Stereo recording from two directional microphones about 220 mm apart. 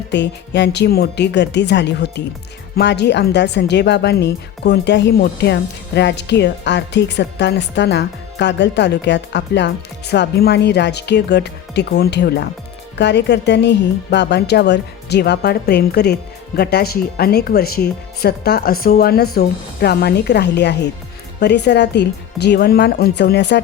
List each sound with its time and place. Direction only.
0.1 s speech: 55° left (ahead or behind)